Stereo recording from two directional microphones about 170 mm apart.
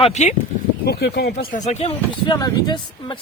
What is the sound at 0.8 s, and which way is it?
Speech, 70° left (ahead or behind).